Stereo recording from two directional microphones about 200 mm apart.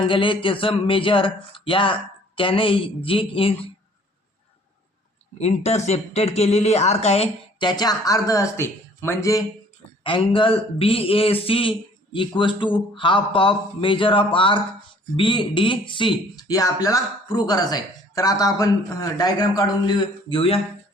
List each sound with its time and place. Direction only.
0.1 s speech: 25° left (ahead or behind)
5.4 s speech: 35° left (ahead or behind); by 9.4 s 15° left (ahead or behind)
10.0 s speech: 25° left (ahead or behind)